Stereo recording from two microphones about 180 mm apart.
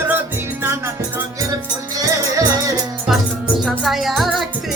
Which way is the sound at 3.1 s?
Centre (ahead or behind).